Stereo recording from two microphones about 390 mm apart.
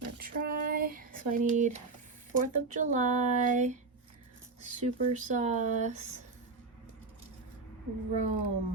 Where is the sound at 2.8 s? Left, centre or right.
Centre.